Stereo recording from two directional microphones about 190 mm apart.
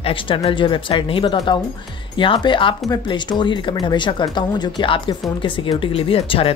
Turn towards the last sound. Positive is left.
turn(degrees=30)  # may be behind; listen again after turning